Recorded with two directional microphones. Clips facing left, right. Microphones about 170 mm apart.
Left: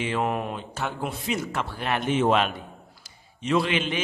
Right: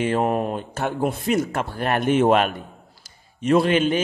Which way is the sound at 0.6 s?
50° right (ahead or behind).